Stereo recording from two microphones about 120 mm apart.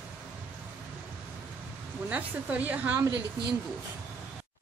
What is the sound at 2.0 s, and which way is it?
A woman's voice, 15° right (ahead or behind).